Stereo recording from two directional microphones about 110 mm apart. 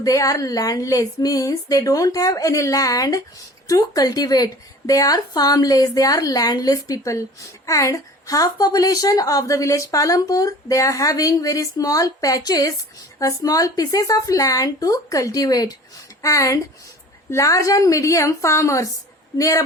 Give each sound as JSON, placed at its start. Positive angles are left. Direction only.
{"t": 0.0, "sound": "a woman's voice", "side_deg": 30}